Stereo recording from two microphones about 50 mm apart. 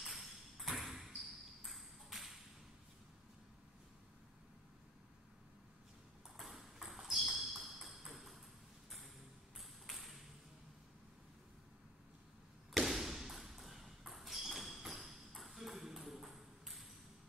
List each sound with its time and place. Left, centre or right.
0.0 s ping: centre
6.3 s ping: centre
9.6 s ping: centre
12.7 s ping: centre